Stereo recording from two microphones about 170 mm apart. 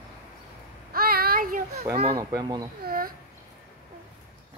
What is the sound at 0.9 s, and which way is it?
Child singing, 60° right (ahead or behind).